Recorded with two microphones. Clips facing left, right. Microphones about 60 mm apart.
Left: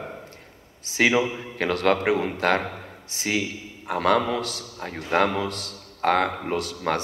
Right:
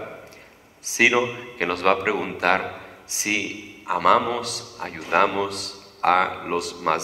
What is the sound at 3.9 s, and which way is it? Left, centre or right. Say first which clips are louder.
A man's voice: right 3 dB; right.